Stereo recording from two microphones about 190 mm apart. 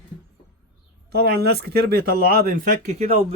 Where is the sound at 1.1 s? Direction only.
60° right (ahead or behind).